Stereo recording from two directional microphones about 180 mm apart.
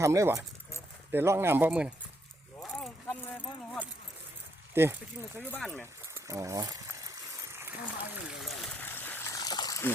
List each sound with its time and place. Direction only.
0.0 s speech: 15° right (ahead or behind)
2.6 s keys jangling: centre (ahead or behind)
4.7 s speech: 15° right (ahead or behind)
5.5 s speech: 5° left (ahead or behind)
6.1 s a sound: 15° right (ahead or behind); by 9.9 s 20° left (ahead or behind)